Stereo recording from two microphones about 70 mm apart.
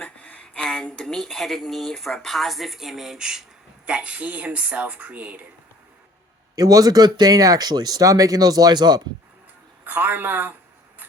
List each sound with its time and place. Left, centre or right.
0.0 s a sound: centre
2.2 s speech: centre
3.8 s speech: centre
6.6 s speech: right
9.8 s speech: right